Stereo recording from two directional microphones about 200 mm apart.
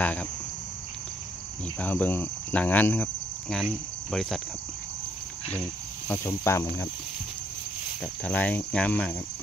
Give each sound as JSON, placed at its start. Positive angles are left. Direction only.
{"t": 0.0, "sound": "cricket", "side_deg": 5}
{"t": 1.8, "sound": "cricket", "side_deg": 10}
{"t": 6.0, "sound": "cricket", "side_deg": 10}
{"t": 8.0, "sound": "cricket", "side_deg": 10}